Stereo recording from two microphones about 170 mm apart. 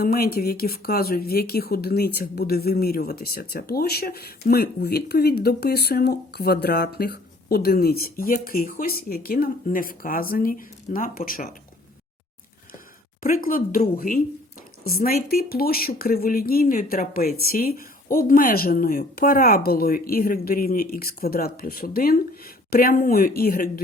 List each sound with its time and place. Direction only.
0.0 s speech: 65° left (ahead or behind)
13.2 s speech: 55° left (ahead or behind)